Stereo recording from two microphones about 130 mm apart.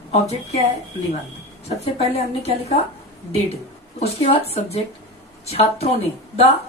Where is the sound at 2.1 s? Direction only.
55° left (ahead or behind).